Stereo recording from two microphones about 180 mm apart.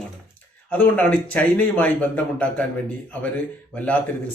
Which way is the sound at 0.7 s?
10° left (ahead or behind).